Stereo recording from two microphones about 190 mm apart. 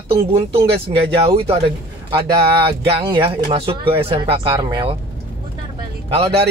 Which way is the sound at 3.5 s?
30° right (ahead or behind).